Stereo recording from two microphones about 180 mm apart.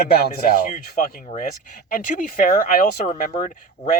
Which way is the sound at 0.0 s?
60° left (ahead or behind).